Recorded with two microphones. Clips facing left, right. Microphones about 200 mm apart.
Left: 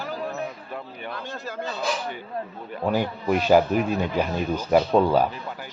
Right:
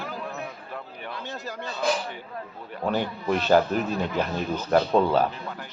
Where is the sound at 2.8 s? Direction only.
10° left (ahead or behind).